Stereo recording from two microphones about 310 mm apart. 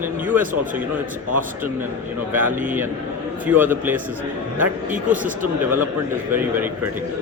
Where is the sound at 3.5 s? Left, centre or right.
Centre.